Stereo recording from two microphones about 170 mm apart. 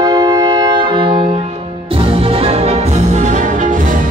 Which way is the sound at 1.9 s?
30° right (ahead or behind).